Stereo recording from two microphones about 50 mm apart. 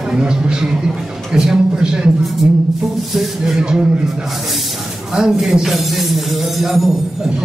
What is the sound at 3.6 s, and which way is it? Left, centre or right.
Speech, centre.